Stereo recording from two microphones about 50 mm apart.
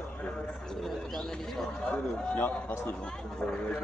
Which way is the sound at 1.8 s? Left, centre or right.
Left.